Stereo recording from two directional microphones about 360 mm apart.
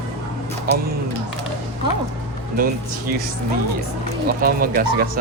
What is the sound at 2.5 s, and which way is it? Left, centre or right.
Speech, right.